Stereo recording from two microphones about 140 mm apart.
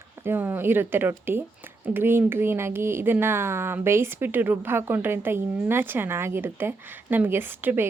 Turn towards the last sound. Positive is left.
turn(degrees=-15)  # may be behind; listen again after turning